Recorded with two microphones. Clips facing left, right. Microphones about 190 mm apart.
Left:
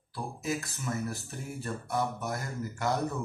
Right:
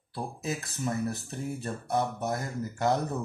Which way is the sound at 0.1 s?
25° right (ahead or behind).